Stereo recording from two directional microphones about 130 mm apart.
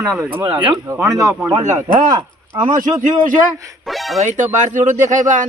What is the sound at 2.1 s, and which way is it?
Speech, 40° right (ahead or behind).